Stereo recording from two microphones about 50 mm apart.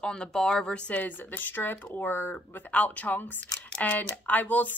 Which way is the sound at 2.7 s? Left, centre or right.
Left.